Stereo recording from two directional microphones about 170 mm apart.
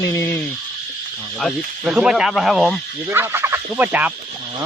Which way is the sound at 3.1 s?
15° right (ahead or behind).